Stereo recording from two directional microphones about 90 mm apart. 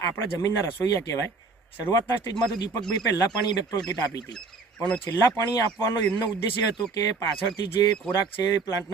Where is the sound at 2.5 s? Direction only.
50° left (ahead or behind).